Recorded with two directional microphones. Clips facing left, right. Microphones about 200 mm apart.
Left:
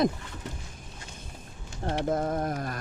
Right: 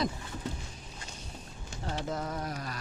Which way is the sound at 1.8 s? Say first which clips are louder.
Left 7 dB; 55° left (ahead or behind).